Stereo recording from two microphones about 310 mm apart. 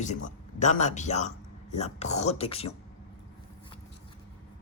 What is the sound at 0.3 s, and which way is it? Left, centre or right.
A man's voice, left.